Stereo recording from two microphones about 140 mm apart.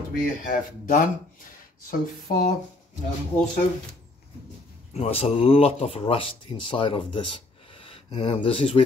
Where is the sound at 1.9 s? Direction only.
70° left (ahead or behind).